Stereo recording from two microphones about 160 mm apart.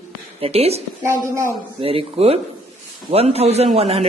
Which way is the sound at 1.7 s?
35° right (ahead or behind).